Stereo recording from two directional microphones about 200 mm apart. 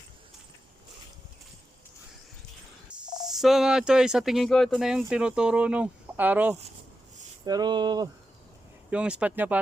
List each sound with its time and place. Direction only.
3.3 s speech: centre (ahead or behind)
7.4 s speech: 20° right (ahead or behind)
8.9 s speech: 5° right (ahead or behind)